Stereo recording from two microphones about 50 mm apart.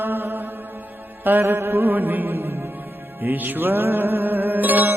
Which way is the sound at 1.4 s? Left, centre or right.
Right.